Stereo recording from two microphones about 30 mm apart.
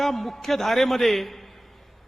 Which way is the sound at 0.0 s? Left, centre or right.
Centre.